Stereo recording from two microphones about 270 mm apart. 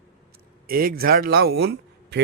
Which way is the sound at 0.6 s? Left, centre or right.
Right.